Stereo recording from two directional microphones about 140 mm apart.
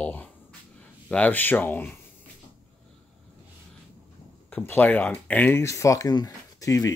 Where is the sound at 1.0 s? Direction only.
10° left (ahead or behind).